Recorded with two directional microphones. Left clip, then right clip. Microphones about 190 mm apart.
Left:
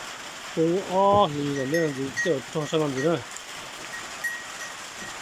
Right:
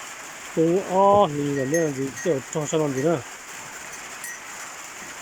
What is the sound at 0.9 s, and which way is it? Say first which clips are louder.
Speech: right 3 dB; centre (ahead or behind).